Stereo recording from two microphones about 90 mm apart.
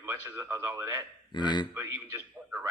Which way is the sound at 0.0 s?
30° right (ahead or behind).